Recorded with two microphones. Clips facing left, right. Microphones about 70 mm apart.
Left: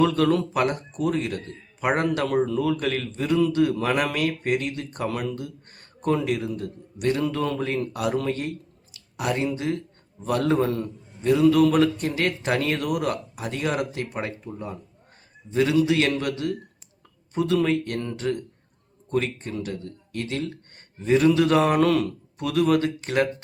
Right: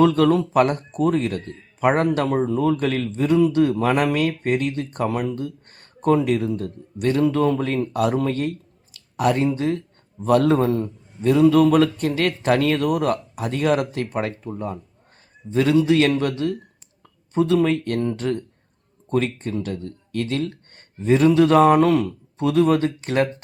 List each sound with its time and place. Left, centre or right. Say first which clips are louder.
0.0 s speech: right 4 dB; right
7.9 s speech: right 6 dB; right
10.7 s speech: right 5 dB; right
15.4 s speech: right 3 dB; right
18.2 s speech: right 2 dB; right